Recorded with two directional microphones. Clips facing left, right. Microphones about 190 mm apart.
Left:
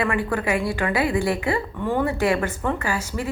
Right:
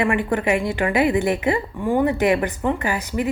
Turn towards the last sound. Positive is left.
turn(degrees=-20)  # may be behind; listen again after turning